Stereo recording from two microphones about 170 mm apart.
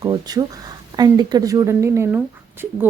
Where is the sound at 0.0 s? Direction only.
25° right (ahead or behind).